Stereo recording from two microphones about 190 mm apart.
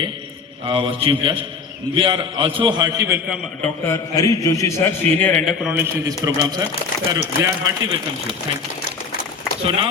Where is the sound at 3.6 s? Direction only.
15° left (ahead or behind); by 8.0 s 20° right (ahead or behind).